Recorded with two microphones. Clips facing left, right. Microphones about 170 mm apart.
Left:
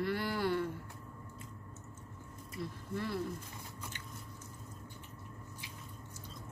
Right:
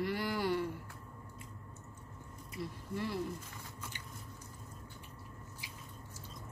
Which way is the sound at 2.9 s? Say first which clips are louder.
Even; 15° right (ahead or behind).